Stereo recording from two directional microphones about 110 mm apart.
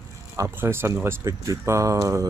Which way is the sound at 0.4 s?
20° right (ahead or behind).